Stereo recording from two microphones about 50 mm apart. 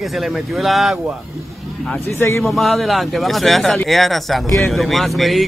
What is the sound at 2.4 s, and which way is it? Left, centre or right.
Speech, centre.